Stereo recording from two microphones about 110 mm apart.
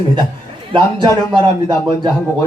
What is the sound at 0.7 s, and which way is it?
A man's voice, 45° right (ahead or behind).